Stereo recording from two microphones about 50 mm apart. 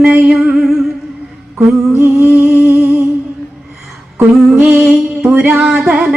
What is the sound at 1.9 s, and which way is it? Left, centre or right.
Humming, right.